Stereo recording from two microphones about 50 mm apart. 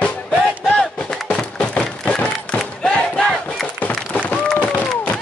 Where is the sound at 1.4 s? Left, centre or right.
Centre.